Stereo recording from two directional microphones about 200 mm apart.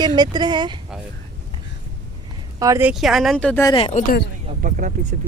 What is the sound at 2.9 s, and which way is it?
Speech, centre (ahead or behind).